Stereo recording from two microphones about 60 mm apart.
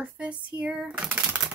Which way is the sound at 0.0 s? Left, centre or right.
Right.